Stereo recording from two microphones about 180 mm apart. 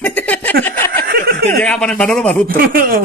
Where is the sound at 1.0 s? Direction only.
55° right (ahead or behind).